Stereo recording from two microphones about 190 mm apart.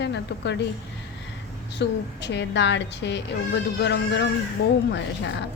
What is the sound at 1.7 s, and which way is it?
A woman's voice, 65° left (ahead or behind).